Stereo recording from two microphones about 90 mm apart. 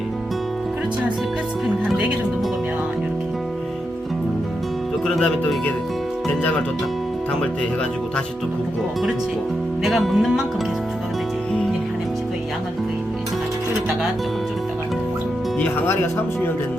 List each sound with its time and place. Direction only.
5.0 s music: 5° left (ahead or behind)
9.8 s music: centre (ahead or behind)
15.9 s speech: 30° left (ahead or behind)